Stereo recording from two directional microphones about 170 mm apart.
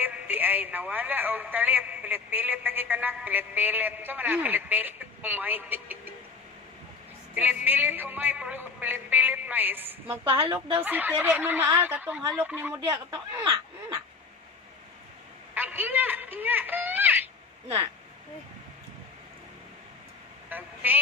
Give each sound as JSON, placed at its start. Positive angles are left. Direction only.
{"t": 0.0, "sound": "speech", "side_deg": -10}
{"t": 7.3, "sound": "speech", "side_deg": -10}
{"t": 10.3, "sound": "a woman's voice", "side_deg": -30}
{"t": 10.8, "sound": "speech", "side_deg": -10}
{"t": 12.7, "sound": "speech", "side_deg": -25}
{"t": 15.5, "sound": "speech", "side_deg": -10}
{"t": 20.4, "sound": "telephone", "side_deg": -10}